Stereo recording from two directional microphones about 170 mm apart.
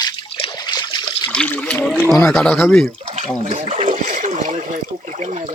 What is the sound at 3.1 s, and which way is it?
Speech, 40° right (ahead or behind).